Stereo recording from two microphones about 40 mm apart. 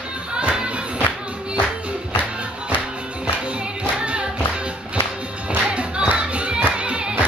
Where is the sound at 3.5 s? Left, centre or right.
Right.